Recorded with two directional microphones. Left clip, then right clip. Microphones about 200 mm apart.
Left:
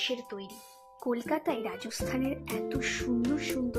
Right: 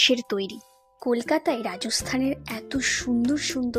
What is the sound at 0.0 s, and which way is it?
Speech, 50° right (ahead or behind).